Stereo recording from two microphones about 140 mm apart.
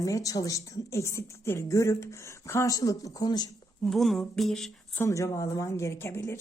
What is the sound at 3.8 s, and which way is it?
Humming, centre (ahead or behind).